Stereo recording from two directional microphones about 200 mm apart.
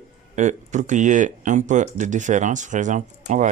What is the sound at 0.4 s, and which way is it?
Speech, 35° right (ahead or behind).